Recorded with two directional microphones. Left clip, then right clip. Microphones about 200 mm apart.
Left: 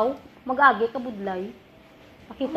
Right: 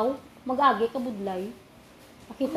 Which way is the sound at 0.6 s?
15° right (ahead or behind).